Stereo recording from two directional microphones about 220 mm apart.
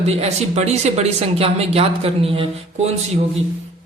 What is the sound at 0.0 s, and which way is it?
Speech, 30° right (ahead or behind).